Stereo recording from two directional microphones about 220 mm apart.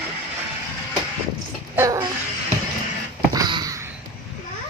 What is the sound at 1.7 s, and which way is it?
Speech, 15° right (ahead or behind).